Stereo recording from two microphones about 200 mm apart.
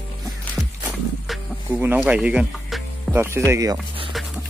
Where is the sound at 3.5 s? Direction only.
15° right (ahead or behind).